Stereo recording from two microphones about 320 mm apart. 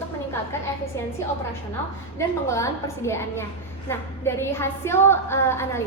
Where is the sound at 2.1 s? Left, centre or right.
Centre.